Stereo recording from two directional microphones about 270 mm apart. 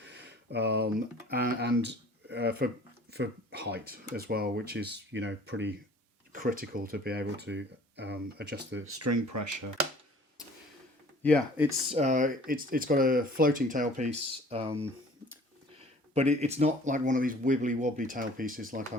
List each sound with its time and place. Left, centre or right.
0.1 s speech: right
6.3 s speech: right
8.7 s speech: right
11.2 s speech: centre
11.9 s speech: right
16.1 s speech: right